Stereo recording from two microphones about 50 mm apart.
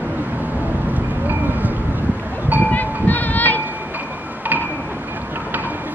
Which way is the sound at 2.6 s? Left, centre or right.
Left.